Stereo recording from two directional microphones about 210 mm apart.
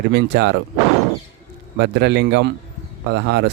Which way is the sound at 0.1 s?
50° right (ahead or behind).